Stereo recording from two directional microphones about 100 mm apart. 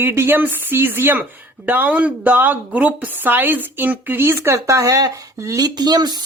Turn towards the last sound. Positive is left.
turn(degrees=-45)  # may be behind; listen again after turning